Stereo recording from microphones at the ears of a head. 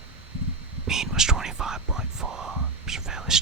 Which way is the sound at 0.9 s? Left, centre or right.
Right.